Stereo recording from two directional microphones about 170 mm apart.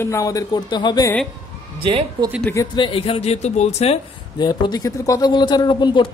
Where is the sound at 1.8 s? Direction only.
30° right (ahead or behind).